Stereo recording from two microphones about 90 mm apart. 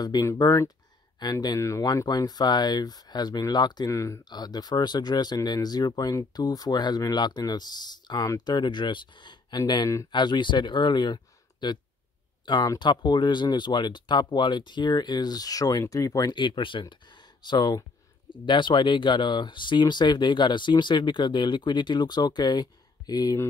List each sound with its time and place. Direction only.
0.0 s speech: 40° left (ahead or behind)
1.2 s speech: 50° left (ahead or behind)
1.6 s speech: 35° left (ahead or behind)
2.0 s speech: 50° left (ahead or behind)
3.9 s speech: 35° left (ahead or behind)
4.2 s speech: 50° left (ahead or behind)
16.3 s speech: 60° left (ahead or behind); by 23.4 s 45° left (ahead or behind)